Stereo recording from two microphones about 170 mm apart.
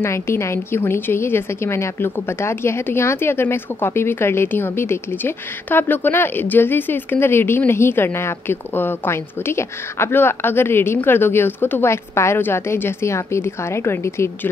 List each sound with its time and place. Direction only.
0.0 s a woman's voice: 15° left (ahead or behind)